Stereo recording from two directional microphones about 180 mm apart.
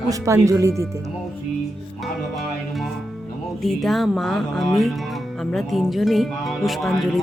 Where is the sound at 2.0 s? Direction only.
Centre (ahead or behind).